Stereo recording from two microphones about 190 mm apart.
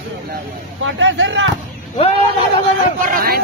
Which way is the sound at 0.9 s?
85° right.